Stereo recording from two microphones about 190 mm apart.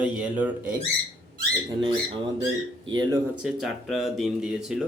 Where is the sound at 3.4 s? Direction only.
Centre (ahead or behind).